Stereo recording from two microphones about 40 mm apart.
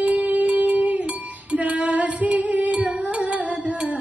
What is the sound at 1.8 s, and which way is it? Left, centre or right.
Female singing, right.